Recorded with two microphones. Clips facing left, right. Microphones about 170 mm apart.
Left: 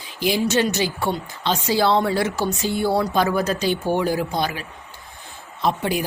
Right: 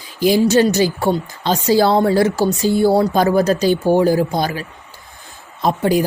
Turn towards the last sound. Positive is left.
turn(degrees=-40)  # may be behind; listen again after turning